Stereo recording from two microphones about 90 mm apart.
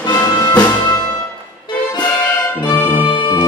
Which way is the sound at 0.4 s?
50° left (ahead or behind).